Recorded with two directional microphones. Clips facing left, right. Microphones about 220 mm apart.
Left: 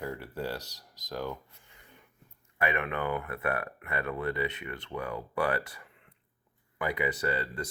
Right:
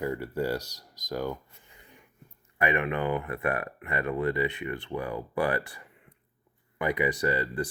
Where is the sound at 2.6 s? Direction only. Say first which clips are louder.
Right 4 dB; 15° right (ahead or behind).